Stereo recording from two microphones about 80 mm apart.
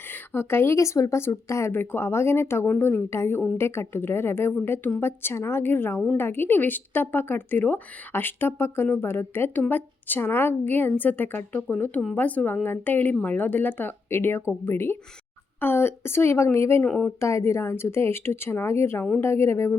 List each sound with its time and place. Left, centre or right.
0.1 s speech: left
1.7 s speech: left
16.8 s speech: centre
17.2 s speech: left